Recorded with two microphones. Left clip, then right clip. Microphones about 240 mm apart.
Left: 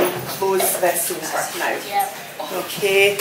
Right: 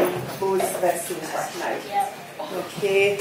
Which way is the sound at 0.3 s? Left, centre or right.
Centre.